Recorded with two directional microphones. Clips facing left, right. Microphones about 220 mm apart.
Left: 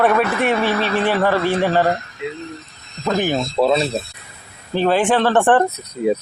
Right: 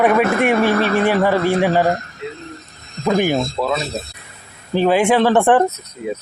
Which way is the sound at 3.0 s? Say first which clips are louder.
Right 3 dB; 10° right (ahead or behind).